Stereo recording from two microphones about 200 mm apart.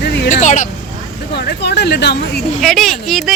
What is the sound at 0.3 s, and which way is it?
Vehicle, 40° left (ahead or behind).